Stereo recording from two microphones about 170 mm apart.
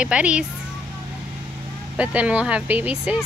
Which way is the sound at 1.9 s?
10° right (ahead or behind).